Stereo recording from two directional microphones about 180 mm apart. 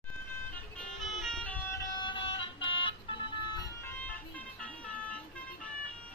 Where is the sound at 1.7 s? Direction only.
25° left (ahead or behind); by 5.2 s 5° left (ahead or behind).